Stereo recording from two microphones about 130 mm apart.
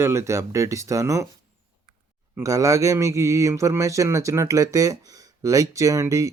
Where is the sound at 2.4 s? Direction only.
25° right (ahead or behind).